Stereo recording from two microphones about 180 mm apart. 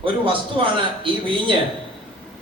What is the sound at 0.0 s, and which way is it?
A man's voice, 30° right (ahead or behind).